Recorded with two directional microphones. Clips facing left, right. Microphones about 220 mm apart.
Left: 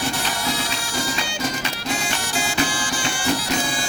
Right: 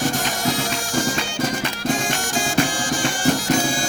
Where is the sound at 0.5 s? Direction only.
50° right (ahead or behind).